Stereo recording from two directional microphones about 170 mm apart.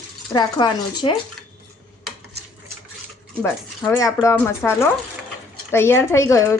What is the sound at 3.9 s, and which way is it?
A woman's voice, 20° left (ahead or behind).